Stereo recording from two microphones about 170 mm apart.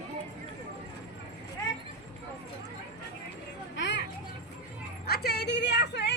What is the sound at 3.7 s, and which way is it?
Children playing, 90° left.